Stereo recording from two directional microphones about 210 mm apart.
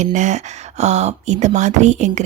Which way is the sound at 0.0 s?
35° right (ahead or behind).